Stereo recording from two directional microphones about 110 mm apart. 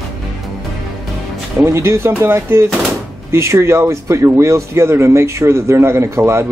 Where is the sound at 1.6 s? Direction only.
25° right (ahead or behind).